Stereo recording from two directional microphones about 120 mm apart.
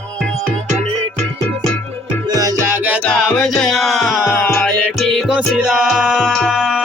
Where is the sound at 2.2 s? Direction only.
30° right (ahead or behind).